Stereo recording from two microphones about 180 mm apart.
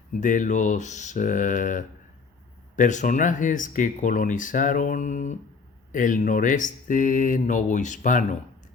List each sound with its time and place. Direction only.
0.1 s speech: 45° left (ahead or behind)